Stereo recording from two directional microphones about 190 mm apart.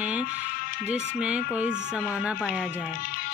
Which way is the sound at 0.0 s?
10° right (ahead or behind).